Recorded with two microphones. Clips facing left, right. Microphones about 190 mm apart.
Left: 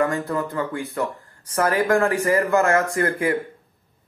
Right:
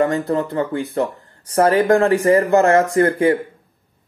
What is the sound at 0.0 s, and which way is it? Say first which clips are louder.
A man's voice: right 4 dB; 30° right (ahead or behind).